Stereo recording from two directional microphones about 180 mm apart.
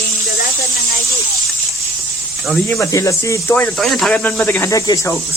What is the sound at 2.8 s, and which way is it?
Speech, 20° left (ahead or behind).